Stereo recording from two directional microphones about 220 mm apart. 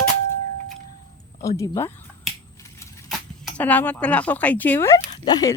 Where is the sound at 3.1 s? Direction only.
5° left (ahead or behind).